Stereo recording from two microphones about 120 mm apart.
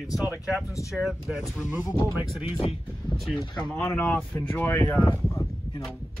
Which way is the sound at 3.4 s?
40° left (ahead or behind).